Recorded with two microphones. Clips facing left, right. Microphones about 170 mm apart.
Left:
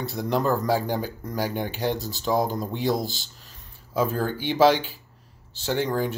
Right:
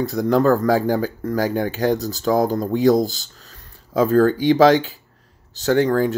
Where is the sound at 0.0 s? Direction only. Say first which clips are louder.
Right 8 dB; 40° right (ahead or behind).